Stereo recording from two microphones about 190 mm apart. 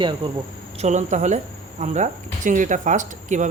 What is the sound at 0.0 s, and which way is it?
Speech, 25° right (ahead or behind).